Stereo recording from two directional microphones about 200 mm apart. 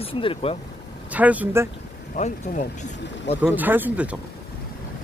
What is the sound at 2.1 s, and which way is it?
Speech, 35° left (ahead or behind).